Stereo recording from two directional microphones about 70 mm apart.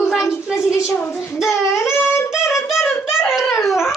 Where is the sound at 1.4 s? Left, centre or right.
Centre.